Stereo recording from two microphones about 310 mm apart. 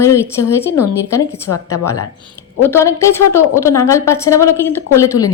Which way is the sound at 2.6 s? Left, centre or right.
Centre.